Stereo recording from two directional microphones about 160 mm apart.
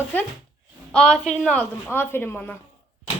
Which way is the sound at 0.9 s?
5° left (ahead or behind).